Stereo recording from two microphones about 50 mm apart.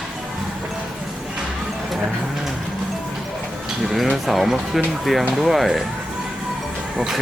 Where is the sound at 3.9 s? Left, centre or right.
Centre.